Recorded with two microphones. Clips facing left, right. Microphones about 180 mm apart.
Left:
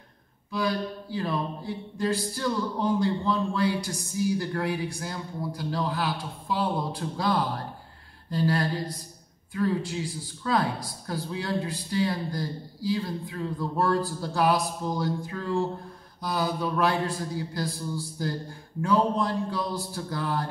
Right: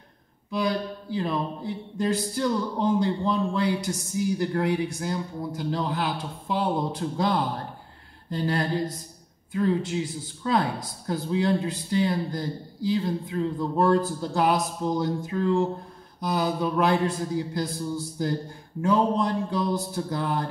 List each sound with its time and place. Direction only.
0.5 s speech: 20° right (ahead or behind)